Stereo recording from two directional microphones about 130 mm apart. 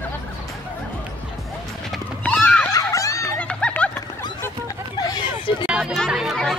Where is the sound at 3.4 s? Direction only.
10° left (ahead or behind).